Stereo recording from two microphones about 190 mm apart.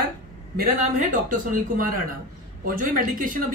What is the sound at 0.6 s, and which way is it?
Speech, 45° right (ahead or behind).